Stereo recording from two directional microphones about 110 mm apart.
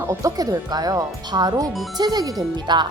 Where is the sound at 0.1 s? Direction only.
30° right (ahead or behind).